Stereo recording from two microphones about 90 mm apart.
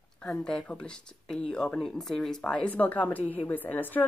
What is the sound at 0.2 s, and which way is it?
Speech, 10° left (ahead or behind).